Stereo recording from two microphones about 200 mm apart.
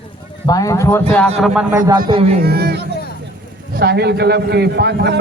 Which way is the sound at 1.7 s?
15° right (ahead or behind).